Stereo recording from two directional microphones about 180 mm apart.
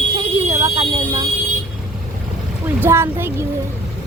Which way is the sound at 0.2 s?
15° right (ahead or behind).